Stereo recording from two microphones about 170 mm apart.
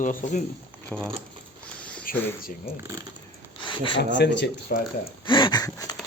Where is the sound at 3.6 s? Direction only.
30° left (ahead or behind).